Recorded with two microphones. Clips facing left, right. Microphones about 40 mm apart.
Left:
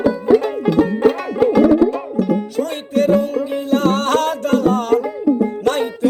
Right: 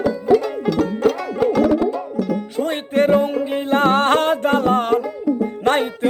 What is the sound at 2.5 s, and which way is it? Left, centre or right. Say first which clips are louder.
Music: even; right.